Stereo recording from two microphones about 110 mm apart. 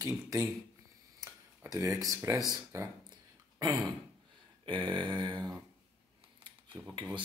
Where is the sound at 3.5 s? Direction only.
25° right (ahead or behind).